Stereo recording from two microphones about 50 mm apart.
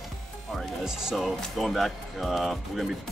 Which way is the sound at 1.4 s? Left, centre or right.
Centre.